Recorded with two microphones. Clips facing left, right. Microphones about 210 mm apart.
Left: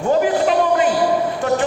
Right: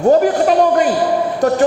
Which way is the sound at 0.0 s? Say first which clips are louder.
Right 4 dB; 45° right (ahead or behind).